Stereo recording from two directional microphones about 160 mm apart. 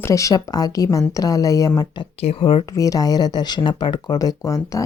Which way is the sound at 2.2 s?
35° left (ahead or behind).